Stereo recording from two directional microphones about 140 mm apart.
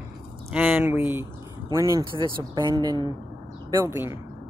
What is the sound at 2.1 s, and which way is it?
Speech, 35° right (ahead or behind).